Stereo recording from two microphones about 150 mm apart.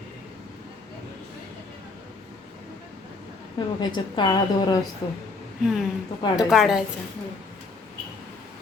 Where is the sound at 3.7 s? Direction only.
30° left (ahead or behind).